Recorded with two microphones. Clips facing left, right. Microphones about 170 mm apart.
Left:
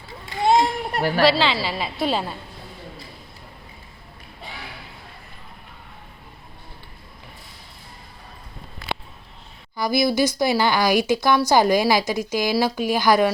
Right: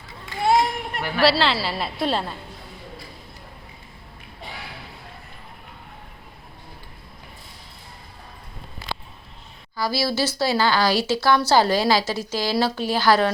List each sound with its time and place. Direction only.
0.4 s children playing: 25° left (ahead or behind)
0.9 s a woman's voice: 35° left (ahead or behind)
1.2 s a woman's voice: centre (ahead or behind)
9.7 s a woman's voice: 15° left (ahead or behind)